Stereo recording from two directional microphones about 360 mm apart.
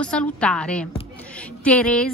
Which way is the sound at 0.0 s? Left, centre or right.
Centre.